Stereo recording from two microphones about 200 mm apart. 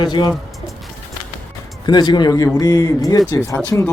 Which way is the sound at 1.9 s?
20° left (ahead or behind).